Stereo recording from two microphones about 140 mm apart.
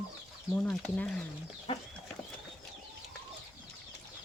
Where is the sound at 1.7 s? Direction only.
40° left (ahead or behind).